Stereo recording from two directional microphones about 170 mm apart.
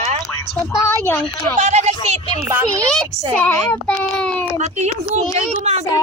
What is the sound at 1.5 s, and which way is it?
Speech, 40° right (ahead or behind).